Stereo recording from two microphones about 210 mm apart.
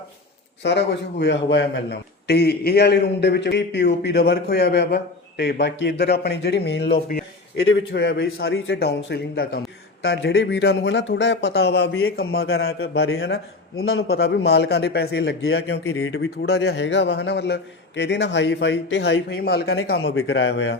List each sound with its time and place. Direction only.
0.6 s a man's voice: 55° left (ahead or behind)
7.5 s a man's voice: 65° left (ahead or behind)
13.7 s a man's voice: 75° left (ahead or behind)
14.1 s a man's voice: 50° left (ahead or behind)
15.8 s speech: 80° left; by 20.0 s 50° left (ahead or behind)
20.1 s speech: 70° left (ahead or behind)